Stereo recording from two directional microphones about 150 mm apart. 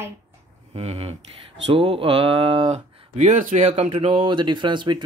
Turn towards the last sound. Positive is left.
turn(degrees=-30)  # may be behind; listen again after turning